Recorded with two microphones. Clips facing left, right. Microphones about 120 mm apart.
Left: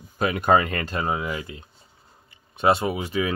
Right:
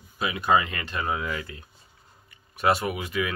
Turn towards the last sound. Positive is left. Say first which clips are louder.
# left 3 dB
turn(degrees=30)  # may be behind; listen again after turning